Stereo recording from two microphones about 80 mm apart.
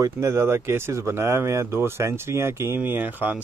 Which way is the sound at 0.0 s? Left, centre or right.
Right.